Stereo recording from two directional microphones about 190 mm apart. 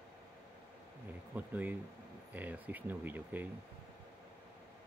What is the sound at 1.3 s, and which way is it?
Speech, 10° right (ahead or behind).